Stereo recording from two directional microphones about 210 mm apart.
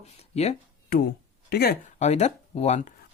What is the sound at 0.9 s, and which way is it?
Speech, 45° left (ahead or behind).